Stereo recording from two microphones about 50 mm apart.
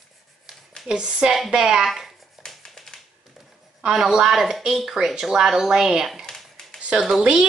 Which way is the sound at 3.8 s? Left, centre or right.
Centre.